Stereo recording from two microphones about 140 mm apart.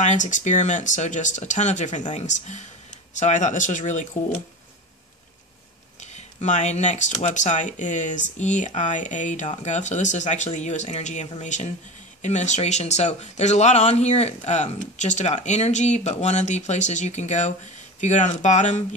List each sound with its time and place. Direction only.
0.0 s speech: 60° left (ahead or behind)
6.1 s speech: 55° left (ahead or behind)